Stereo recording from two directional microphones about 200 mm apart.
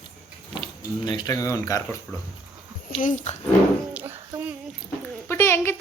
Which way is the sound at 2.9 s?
40° left (ahead or behind).